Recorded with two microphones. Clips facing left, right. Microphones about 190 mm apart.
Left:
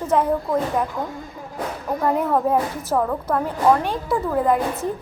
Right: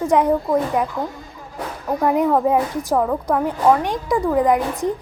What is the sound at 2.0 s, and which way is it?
A woman's voice, 15° right (ahead or behind).